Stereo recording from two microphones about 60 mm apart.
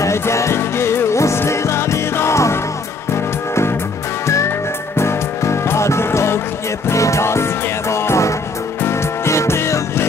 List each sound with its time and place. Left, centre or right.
0.0 s music: left
4.9 s music: left